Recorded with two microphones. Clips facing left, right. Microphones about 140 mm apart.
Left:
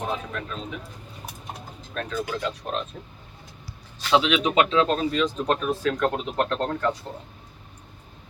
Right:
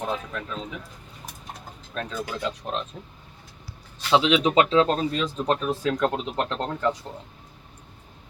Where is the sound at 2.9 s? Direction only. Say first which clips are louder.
Even; 15° right (ahead or behind).